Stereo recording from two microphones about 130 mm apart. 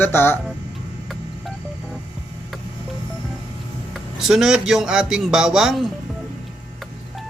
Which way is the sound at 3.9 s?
Centre (ahead or behind).